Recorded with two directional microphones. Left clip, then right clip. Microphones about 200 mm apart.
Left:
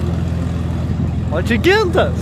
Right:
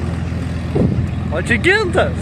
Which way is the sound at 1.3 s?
Centre (ahead or behind).